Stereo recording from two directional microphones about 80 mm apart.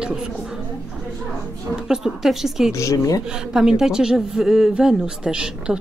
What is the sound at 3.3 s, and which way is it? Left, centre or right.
A woman's voice, centre.